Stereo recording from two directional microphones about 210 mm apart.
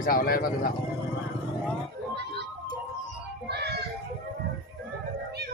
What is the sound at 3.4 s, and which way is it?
Music, 50° right (ahead or behind).